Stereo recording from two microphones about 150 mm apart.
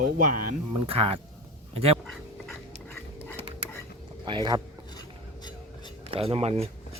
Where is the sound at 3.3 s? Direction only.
45° right (ahead or behind).